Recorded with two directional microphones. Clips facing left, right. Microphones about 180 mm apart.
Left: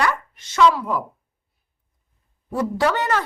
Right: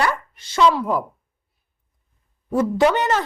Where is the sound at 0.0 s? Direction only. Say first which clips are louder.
Even; 30° right (ahead or behind).